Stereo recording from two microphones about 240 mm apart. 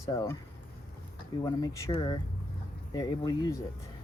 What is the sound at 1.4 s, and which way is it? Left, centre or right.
Speech, centre.